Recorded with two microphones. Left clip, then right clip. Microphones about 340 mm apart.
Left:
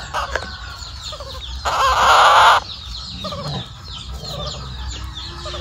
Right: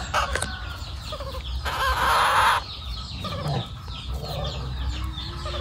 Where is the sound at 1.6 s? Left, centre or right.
Centre.